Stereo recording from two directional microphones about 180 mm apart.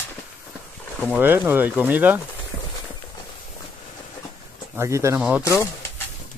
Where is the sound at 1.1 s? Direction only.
10° right (ahead or behind).